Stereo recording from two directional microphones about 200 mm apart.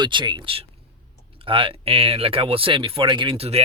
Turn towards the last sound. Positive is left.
turn(degrees=-30)  # may be behind; listen again after turning